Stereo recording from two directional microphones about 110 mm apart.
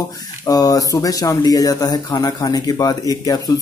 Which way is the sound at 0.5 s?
35° left (ahead or behind).